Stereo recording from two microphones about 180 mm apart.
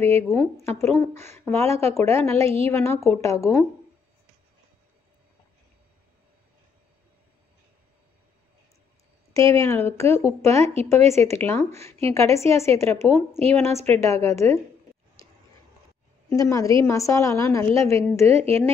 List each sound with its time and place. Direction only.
0.3 s a woman's voice: 15° left (ahead or behind)
2.4 s speech: 35° right (ahead or behind)
2.7 s a woman's voice: 15° left (ahead or behind)
9.3 s a woman's voice: 15° left (ahead or behind)
10.6 s speech: 35° right (ahead or behind)
11.2 s a woman's voice: 15° left (ahead or behind)
16.3 s a woman's voice: 15° left (ahead or behind)